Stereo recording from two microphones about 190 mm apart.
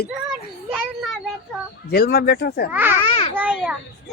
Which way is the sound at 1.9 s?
55° left (ahead or behind).